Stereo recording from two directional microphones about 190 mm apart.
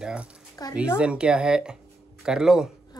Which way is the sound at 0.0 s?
5° right (ahead or behind).